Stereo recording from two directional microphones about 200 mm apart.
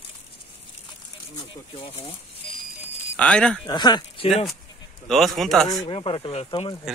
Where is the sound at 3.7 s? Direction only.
20° left (ahead or behind).